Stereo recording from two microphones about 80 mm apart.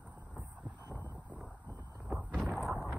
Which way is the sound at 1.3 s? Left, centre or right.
Centre.